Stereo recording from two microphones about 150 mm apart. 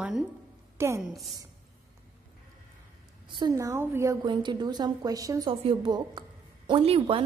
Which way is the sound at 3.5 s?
20° right (ahead or behind).